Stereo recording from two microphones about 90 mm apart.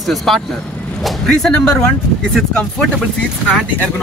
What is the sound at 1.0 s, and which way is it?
Vehicle, centre (ahead or behind).